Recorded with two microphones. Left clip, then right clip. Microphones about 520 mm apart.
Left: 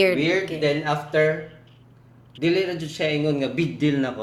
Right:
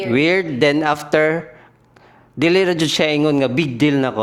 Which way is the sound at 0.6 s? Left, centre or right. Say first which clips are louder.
Right 7 dB; right.